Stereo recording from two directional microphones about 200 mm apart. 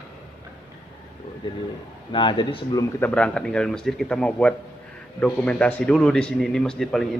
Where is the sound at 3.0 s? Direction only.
5° left (ahead or behind).